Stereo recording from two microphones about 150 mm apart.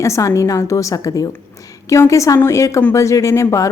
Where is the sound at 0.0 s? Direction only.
20° left (ahead or behind).